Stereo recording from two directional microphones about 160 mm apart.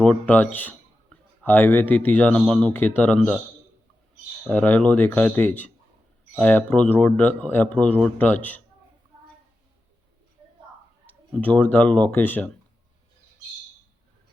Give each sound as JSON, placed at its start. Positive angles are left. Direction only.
{"t": 0.0, "sound": "speech", "side_deg": 10}
{"t": 4.4, "sound": "speech", "side_deg": 10}
{"t": 11.0, "sound": "speech", "side_deg": 10}